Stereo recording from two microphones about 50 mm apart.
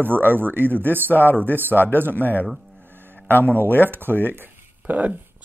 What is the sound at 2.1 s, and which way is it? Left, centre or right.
Speech, left.